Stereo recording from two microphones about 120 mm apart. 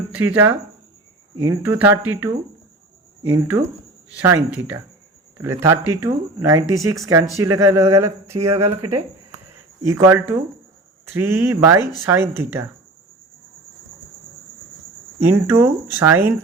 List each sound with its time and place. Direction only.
0.1 s speech: 15° right (ahead or behind)
9.8 s speech: 25° right (ahead or behind)
15.2 s speech: 20° right (ahead or behind)